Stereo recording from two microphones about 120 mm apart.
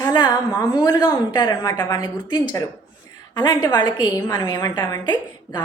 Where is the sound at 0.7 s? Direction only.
40° left (ahead or behind).